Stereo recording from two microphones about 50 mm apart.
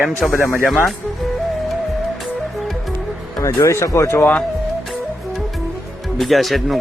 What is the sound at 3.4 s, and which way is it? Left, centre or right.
Speech, left.